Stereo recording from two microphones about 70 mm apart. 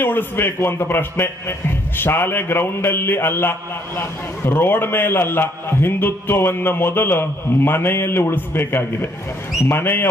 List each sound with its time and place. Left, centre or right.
0.0 s a man's voice: left